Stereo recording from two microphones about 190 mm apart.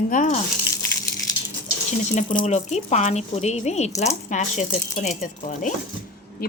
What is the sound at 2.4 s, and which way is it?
A woman's voice, 35° left (ahead or behind).